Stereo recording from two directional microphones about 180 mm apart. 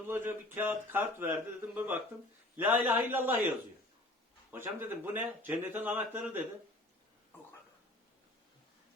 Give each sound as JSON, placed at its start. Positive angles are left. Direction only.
{"t": 0.1, "sound": "speech", "side_deg": -10}
{"t": 4.5, "sound": "speech", "side_deg": -10}